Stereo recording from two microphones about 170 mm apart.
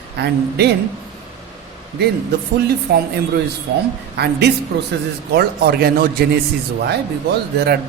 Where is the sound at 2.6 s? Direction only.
70° right (ahead or behind).